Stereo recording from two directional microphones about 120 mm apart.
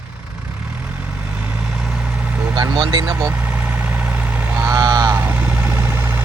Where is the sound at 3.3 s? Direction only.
10° right (ahead or behind).